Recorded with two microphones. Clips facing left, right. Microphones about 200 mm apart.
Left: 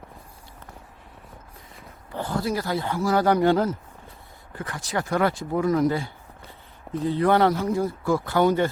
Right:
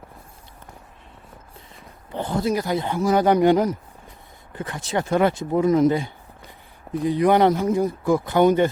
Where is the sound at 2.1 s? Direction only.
20° right (ahead or behind).